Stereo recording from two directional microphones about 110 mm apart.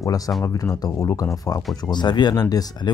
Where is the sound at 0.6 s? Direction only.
30° left (ahead or behind).